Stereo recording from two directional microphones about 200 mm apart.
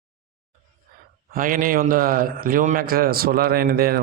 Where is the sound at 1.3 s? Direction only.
45° right (ahead or behind).